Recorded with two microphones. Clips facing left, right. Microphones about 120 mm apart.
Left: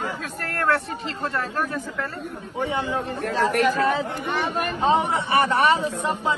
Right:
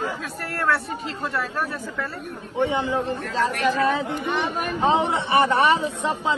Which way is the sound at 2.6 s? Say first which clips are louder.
Right 3 dB; 25° right (ahead or behind).